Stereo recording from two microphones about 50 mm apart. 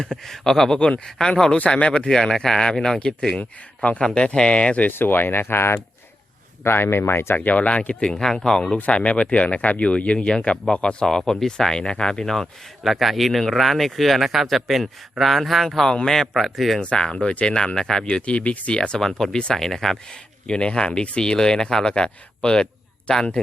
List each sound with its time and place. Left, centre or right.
0.0 s speech: centre
1.5 s speech: left
4.9 s speech: left
7.3 s speech: left
11.3 s speech: centre
16.8 s speech: left
18.8 s speech: centre